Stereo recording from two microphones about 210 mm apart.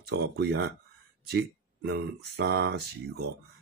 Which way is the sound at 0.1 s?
50° right (ahead or behind).